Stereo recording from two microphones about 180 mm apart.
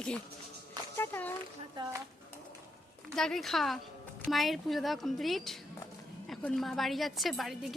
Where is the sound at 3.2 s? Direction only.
Centre (ahead or behind).